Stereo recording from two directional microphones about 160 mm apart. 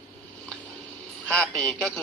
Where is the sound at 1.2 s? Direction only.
5° left (ahead or behind).